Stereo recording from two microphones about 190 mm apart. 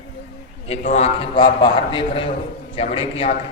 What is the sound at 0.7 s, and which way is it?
A man's voice, 35° left (ahead or behind).